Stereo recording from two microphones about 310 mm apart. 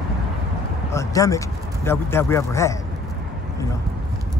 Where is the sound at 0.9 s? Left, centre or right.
Centre.